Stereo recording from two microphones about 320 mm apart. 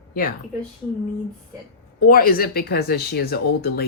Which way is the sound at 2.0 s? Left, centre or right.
Left.